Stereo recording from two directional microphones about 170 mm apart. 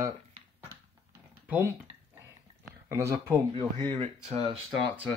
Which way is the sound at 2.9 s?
15° right (ahead or behind).